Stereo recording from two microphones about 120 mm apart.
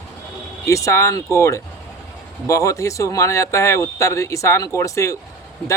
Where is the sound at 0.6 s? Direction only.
25° left (ahead or behind).